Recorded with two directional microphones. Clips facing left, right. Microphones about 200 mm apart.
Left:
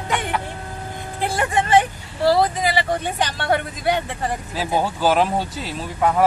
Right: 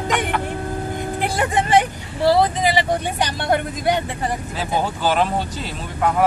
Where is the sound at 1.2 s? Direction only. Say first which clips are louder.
Left 1 dB; 15° right (ahead or behind).